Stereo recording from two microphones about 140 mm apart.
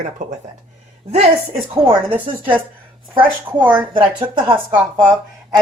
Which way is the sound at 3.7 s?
40° right (ahead or behind).